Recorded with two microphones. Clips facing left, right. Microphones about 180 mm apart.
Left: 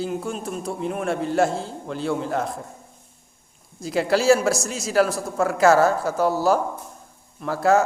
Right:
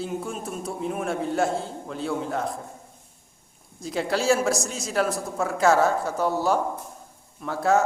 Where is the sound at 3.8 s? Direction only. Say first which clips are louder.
Left 5 dB; 5° left (ahead or behind).